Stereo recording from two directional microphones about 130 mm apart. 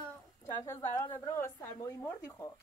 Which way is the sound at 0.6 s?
20° left (ahead or behind).